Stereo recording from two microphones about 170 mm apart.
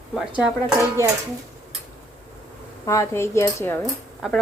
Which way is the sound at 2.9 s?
15° left (ahead or behind).